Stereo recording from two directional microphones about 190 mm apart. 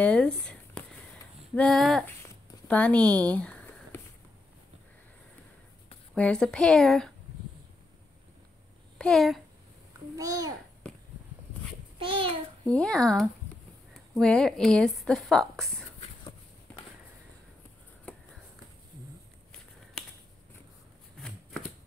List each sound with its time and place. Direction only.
0.0 s a sound: 5° left (ahead or behind)
1.5 s a woman's voice: 5° left (ahead or behind)
2.2 s a sound: 10° left (ahead or behind)
6.1 s a woman's voice: 5° left (ahead or behind)
8.9 s a child's voice: 5° left (ahead or behind)
10.1 s a child's voice: 20° right (ahead or behind)
12.0 s a child's voice: 30° right (ahead or behind)
12.6 s a woman's voice: 5° left (ahead or behind)
21.2 s shuffling cards: 5° left (ahead or behind)